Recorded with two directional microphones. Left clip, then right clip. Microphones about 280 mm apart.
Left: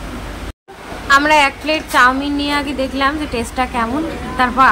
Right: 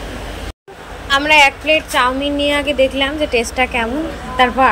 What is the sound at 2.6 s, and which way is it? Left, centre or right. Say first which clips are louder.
Speech: right 6 dB; left.